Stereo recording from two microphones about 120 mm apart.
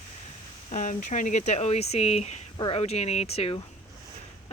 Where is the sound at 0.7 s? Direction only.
90° left; by 2.4 s 65° left (ahead or behind).